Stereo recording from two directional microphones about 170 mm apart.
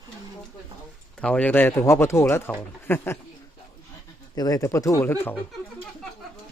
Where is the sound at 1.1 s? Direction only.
5° left (ahead or behind).